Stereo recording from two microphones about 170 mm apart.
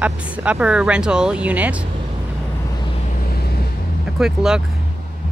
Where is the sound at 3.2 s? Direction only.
65° left (ahead or behind).